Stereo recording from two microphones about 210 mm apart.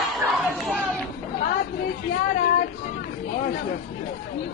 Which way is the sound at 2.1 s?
45° left (ahead or behind).